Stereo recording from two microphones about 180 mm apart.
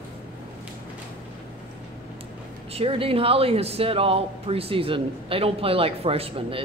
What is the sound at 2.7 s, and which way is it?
Speech, 30° right (ahead or behind).